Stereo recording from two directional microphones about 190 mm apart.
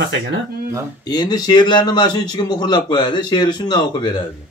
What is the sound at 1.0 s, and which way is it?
A man's voice, 20° left (ahead or behind).